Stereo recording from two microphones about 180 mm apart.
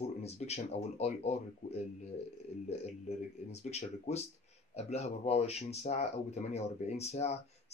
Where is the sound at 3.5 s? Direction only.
35° left (ahead or behind).